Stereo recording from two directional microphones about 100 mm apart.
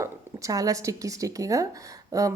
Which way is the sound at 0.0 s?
35° right (ahead or behind).